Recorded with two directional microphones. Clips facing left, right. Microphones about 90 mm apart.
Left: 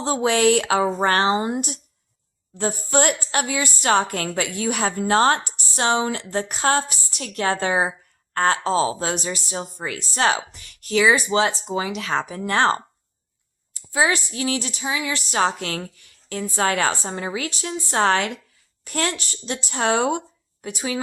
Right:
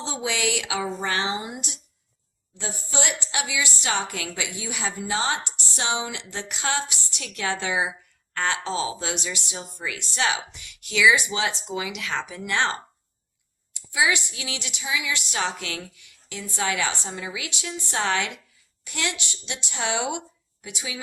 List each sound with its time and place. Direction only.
0.0 s a woman's voice: 50° left (ahead or behind)